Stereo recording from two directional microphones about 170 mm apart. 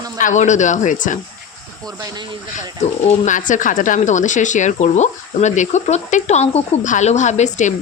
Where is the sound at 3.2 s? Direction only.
50° left (ahead or behind).